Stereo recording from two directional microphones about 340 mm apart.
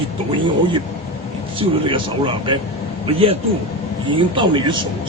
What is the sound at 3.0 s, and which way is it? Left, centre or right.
Speech, centre.